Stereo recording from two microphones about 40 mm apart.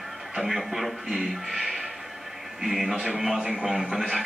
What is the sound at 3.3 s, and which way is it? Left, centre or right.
Speech, right.